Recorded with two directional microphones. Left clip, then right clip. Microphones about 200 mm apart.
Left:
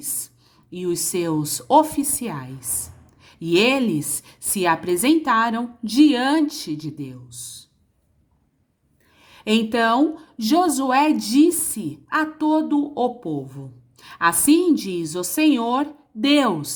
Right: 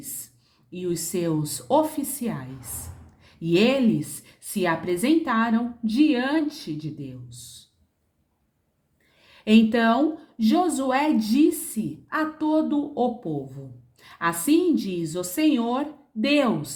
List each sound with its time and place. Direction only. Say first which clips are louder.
0.7 s a woman's voice: left 4 dB; 30° left (ahead or behind)
9.2 s speech: right 1 dB; 30° left (ahead or behind)